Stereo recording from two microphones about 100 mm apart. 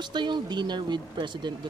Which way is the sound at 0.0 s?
50° right (ahead or behind).